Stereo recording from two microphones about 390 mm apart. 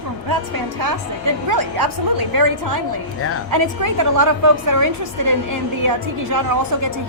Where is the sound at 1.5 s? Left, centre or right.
Right.